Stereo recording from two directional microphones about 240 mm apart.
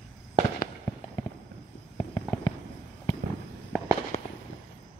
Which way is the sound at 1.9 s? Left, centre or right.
Centre.